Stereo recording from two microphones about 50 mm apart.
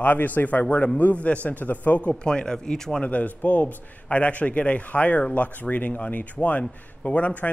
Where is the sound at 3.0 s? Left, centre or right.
Left.